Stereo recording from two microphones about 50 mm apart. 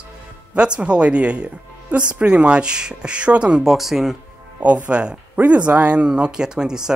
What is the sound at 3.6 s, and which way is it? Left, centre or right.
Speech, centre.